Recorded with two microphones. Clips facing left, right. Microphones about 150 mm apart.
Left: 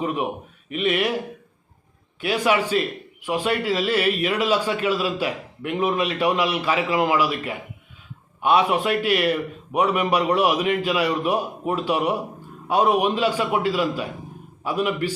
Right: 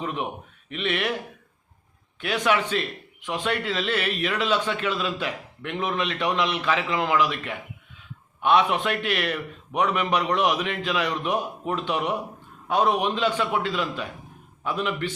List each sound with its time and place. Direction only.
0.0 s a man's voice: 10° left (ahead or behind)
2.2 s a man's voice: 10° left (ahead or behind)